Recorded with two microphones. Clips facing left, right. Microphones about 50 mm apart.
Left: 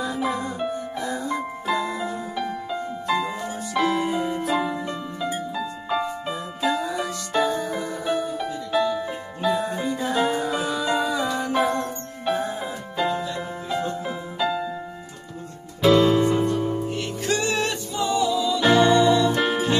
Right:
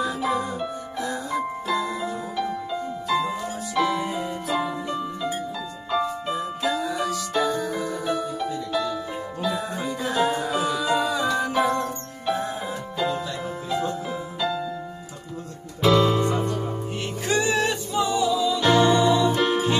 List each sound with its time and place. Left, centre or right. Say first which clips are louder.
0.0 s music: right 1 dB; centre
9.4 s music: left 4 dB; centre
15.9 s music: left 2 dB; left
16.9 s music: even; centre
18.6 s music: left 2 dB; centre
18.9 s music: left 1 dB; centre